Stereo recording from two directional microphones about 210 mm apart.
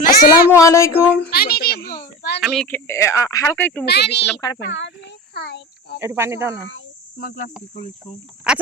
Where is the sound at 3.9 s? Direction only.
50° left (ahead or behind).